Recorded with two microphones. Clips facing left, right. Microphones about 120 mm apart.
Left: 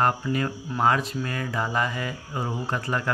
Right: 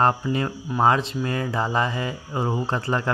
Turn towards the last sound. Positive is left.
turn(degrees=-30)  # may be behind; listen again after turning